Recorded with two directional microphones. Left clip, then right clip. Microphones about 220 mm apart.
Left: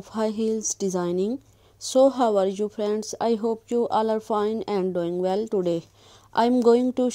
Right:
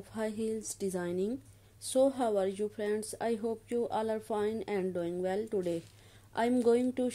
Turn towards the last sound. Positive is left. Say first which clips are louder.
# left 9 dB
turn(degrees=30)  # may be behind; listen again after turning